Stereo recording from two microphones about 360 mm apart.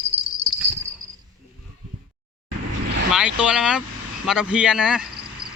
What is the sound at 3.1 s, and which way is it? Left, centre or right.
Vehicle, centre.